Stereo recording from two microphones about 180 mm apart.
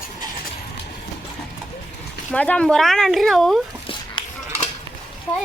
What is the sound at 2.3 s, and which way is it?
A woman's voice, 5° left (ahead or behind).